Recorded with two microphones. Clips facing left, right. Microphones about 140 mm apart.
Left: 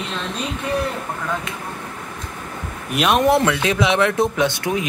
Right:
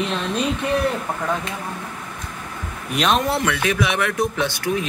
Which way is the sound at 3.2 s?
20° left (ahead or behind).